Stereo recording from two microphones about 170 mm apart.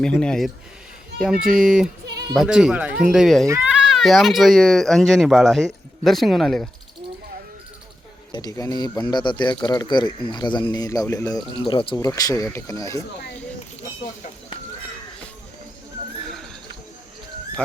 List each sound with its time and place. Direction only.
0.0 s speech: 5° left (ahead or behind)
8.3 s speech: 20° left (ahead or behind)
11.5 s speech: 30° left (ahead or behind)
11.9 s speech: 20° left (ahead or behind)
16.2 s horse: centre (ahead or behind)